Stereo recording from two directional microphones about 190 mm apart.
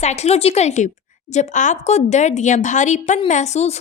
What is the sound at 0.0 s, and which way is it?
Speech, 35° left (ahead or behind).